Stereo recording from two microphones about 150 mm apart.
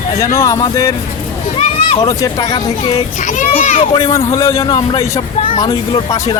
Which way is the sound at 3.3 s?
55° left (ahead or behind).